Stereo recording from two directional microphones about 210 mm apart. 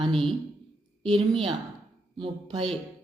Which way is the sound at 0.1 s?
Centre (ahead or behind).